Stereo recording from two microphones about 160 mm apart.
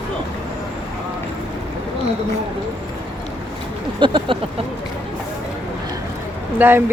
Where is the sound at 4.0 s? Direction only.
30° right (ahead or behind).